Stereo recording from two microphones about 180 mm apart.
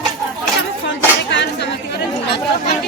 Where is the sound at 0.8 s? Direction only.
80° left.